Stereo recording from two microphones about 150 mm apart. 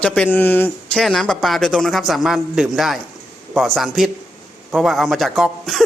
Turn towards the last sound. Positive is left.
turn(degrees=0)  # may be behind; listen again after turning